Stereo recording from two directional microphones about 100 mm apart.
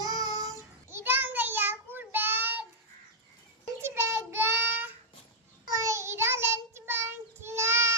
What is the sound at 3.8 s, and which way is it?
Child singing, 25° right (ahead or behind).